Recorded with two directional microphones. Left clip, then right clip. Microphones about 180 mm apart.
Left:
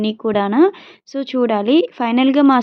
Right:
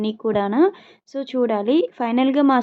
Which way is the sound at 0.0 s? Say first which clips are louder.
Left 3 dB; 30° left (ahead or behind).